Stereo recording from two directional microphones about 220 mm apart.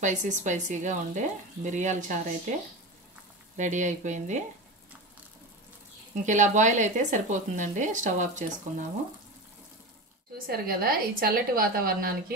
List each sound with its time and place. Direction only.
0.0 s speech: 35° right (ahead or behind)
3.5 s speech: 35° right (ahead or behind)
6.2 s speech: 35° right (ahead or behind)
10.3 s speech: 40° right (ahead or behind)